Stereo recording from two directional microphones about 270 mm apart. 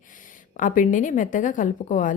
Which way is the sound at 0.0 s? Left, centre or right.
Left.